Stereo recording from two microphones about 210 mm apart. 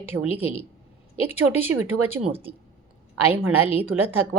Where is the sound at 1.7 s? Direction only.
90° right.